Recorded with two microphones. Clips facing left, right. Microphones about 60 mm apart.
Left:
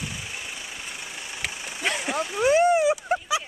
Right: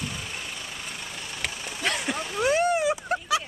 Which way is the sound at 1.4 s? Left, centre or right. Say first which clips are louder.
Left 1 dB; centre.